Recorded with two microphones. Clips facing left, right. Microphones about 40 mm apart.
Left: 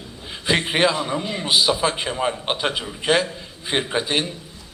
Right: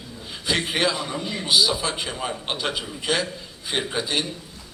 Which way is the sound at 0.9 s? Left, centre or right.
Centre.